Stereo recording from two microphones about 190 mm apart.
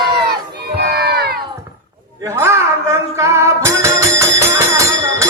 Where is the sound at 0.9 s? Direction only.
55° right (ahead or behind).